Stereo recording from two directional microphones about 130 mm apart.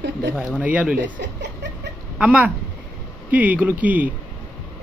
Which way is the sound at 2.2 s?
10° right (ahead or behind).